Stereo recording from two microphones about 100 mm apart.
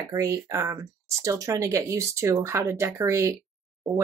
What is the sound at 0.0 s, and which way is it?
Speech, 30° right (ahead or behind).